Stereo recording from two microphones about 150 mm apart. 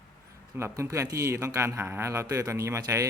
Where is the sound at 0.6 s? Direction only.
20° right (ahead or behind).